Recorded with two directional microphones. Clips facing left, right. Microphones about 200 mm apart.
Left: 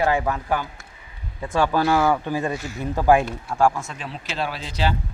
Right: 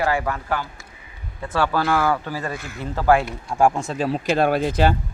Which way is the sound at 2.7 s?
15° left (ahead or behind).